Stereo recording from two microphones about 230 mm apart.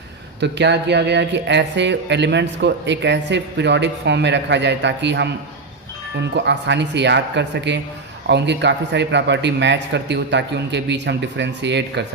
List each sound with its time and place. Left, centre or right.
0.3 s speech: right